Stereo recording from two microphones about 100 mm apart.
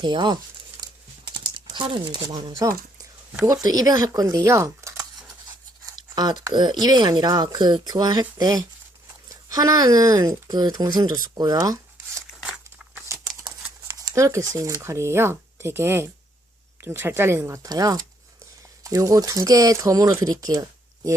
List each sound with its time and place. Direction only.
0.0 s speech: 45° right (ahead or behind); by 5.0 s 30° right (ahead or behind)
6.0 s speech: 45° right (ahead or behind)
12.3 s crumpling: 10° right (ahead or behind)
14.0 s speech: 30° right (ahead or behind)
20.4 s a sound: 35° right (ahead or behind)